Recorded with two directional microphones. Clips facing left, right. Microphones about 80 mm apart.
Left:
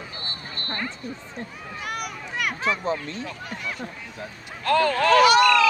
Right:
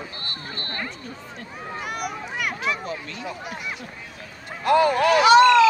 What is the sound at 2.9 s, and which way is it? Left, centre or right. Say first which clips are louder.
Speech: left 5 dB; left.